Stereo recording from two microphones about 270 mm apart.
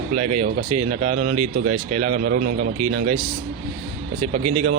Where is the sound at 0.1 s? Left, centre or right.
Right.